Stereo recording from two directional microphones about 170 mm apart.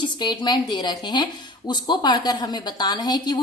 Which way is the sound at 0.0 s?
25° left (ahead or behind).